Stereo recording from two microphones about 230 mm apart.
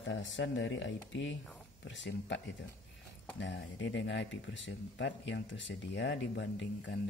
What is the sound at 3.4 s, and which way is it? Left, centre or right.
Speech, left.